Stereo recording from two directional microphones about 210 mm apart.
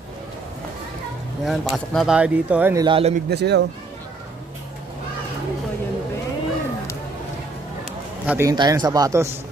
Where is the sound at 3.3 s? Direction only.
55° right (ahead or behind).